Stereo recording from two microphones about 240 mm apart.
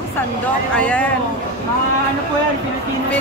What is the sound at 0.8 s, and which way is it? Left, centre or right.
Speech, centre.